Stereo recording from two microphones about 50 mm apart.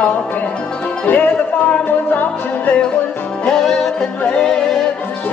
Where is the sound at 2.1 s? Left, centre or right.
Left.